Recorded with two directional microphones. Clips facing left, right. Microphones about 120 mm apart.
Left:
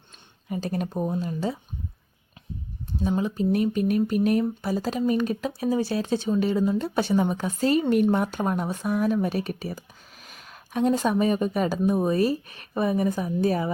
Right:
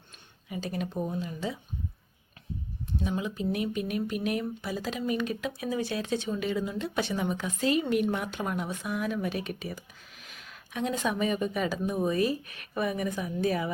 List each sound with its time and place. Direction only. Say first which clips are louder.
0.4 s speech: left 5 dB; 45° left (ahead or behind)
3.0 s speech: left 7 dB; 35° left (ahead or behind)